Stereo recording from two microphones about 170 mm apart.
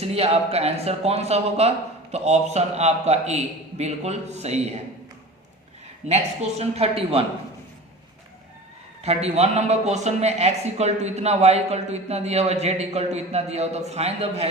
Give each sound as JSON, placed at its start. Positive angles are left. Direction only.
{"t": 0.0, "sound": "a man's voice", "side_deg": -35}
{"t": 6.1, "sound": "a man's voice", "side_deg": -40}
{"t": 9.0, "sound": "a man's voice", "side_deg": -40}